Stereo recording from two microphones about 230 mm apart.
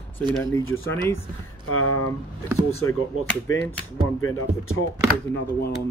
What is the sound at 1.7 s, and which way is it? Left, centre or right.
Speech, left.